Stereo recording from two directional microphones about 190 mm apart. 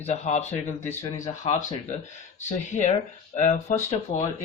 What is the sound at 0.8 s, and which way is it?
Speech, 10° left (ahead or behind).